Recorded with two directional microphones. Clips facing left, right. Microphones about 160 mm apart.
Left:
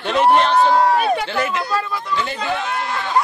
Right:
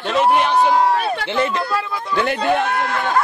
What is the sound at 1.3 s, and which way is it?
Speech, 30° right (ahead or behind).